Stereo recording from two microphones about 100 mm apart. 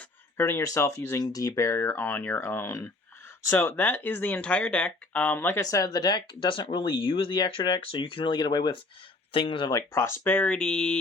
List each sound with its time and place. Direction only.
0.3 s speech: 25° left (ahead or behind)
5.5 s speech: 35° left (ahead or behind)
9.3 s speech: 60° left (ahead or behind)
10.0 s speech: 20° left (ahead or behind)